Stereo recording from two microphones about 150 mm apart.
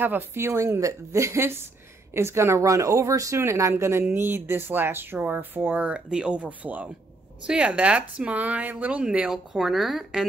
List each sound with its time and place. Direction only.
0.0 s speech: 15° right (ahead or behind)